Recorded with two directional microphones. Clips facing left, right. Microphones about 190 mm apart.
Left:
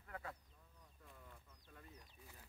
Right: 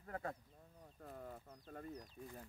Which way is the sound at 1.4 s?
40° right (ahead or behind).